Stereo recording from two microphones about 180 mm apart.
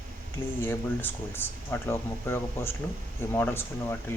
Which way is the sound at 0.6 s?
10° left (ahead or behind).